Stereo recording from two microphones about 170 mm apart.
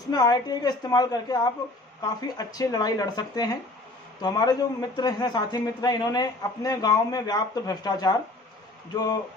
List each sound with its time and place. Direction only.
0.1 s a man's voice: 25° left (ahead or behind)